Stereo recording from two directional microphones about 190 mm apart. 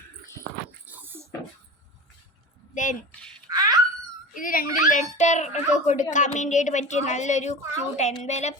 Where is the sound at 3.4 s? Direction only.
20° right (ahead or behind).